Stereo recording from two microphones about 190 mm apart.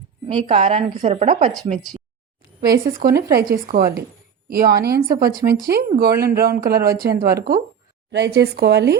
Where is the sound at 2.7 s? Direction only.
50° right (ahead or behind).